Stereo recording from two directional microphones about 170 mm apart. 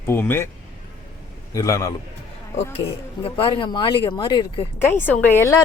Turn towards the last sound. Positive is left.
turn(degrees=15)  # may be behind; listen again after turning